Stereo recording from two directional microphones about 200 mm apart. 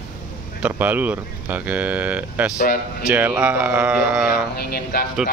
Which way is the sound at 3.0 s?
5° right (ahead or behind).